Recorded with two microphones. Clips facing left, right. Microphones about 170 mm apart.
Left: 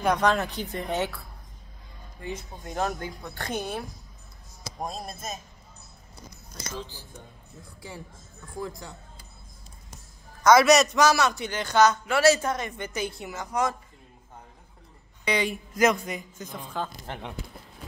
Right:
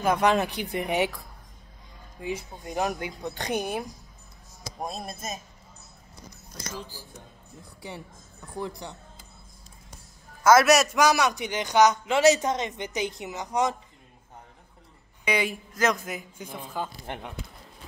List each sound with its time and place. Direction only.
0.0 s a man's voice: 5° right (ahead or behind)
6.8 s a man's voice: 10° right (ahead or behind)
10.4 s a man's voice: 5° right (ahead or behind)
15.2 s a man's voice: 10° right (ahead or behind)
15.7 s a man's voice: 10° left (ahead or behind)
16.0 s a man's voice: 5° right (ahead or behind)